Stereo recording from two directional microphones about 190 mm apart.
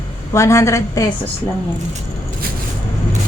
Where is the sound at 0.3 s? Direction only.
15° left (ahead or behind).